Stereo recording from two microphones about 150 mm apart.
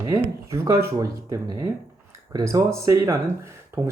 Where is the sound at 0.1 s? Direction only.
20° right (ahead or behind).